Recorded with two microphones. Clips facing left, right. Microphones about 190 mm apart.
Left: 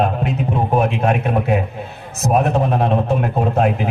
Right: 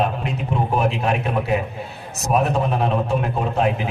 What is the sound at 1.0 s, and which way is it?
Speech, 50° left (ahead or behind).